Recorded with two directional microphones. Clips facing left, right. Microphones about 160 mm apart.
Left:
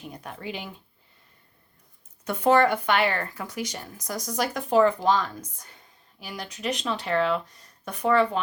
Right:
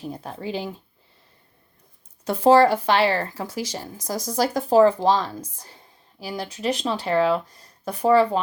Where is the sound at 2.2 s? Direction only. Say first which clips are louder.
Right 5 dB; 30° right (ahead or behind).